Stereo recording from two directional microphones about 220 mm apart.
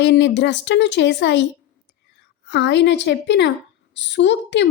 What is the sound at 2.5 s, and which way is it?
A woman's voice, 50° left (ahead or behind).